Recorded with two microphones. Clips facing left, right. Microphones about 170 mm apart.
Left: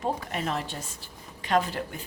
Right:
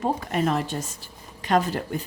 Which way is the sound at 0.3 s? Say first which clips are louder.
Right 7 dB; 45° right (ahead or behind).